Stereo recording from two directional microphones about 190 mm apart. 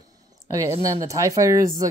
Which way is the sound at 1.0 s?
15° right (ahead or behind).